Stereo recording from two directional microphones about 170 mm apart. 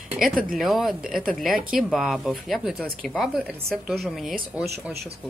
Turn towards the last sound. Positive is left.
turn(degrees=0)  # may be behind; listen again after turning